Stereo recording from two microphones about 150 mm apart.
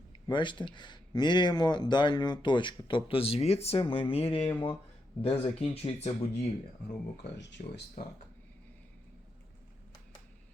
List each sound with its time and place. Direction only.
0.3 s speech: 30° left (ahead or behind)
7.6 s speech: 75° left (ahead or behind)